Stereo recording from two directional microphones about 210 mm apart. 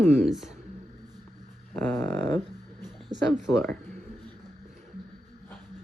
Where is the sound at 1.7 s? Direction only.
10° left (ahead or behind).